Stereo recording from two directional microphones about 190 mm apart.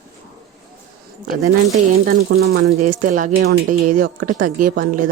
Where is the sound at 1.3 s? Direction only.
40° right (ahead or behind).